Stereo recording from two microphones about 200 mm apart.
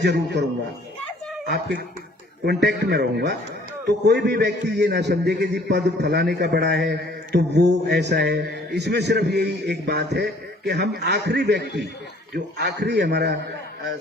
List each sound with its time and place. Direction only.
0.0 s a man's voice: 60° right (ahead or behind)
1.5 s a man's voice: 55° right (ahead or behind)